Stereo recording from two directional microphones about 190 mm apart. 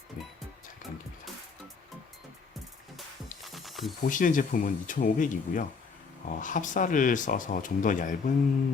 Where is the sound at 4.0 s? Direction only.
45° left (ahead or behind).